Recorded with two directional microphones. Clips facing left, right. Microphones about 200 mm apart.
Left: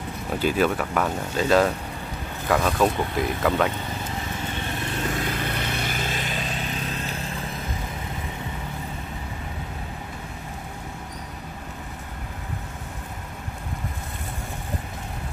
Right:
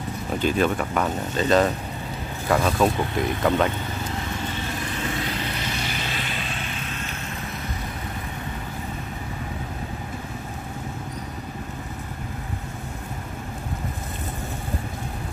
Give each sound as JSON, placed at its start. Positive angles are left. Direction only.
{"t": 0.4, "sound": "speech", "side_deg": 5}
{"t": 5.2, "sound": "vehicle", "side_deg": 50}